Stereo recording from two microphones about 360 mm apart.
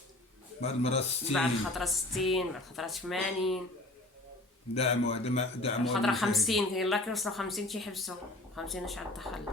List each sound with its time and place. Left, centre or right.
0.6 s speech: centre
1.3 s speech: centre
4.7 s speech: centre
5.8 s speech: centre